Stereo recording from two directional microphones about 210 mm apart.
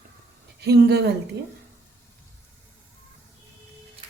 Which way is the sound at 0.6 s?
50° right (ahead or behind).